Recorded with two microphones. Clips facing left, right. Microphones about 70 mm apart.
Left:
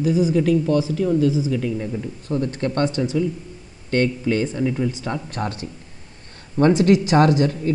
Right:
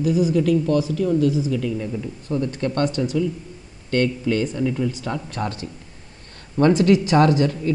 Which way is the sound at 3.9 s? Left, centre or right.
Left.